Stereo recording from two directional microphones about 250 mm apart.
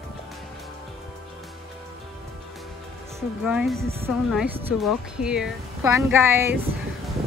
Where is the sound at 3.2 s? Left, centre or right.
Centre.